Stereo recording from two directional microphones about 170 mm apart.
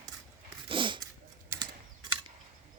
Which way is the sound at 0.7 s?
30° right (ahead or behind).